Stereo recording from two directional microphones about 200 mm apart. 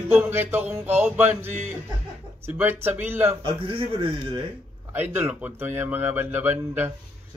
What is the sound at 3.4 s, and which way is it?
Speech, 25° right (ahead or behind).